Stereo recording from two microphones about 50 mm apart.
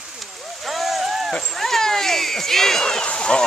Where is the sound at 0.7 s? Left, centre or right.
Centre.